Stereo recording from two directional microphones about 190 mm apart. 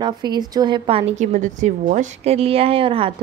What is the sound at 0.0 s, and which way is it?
A woman's voice, 20° right (ahead or behind).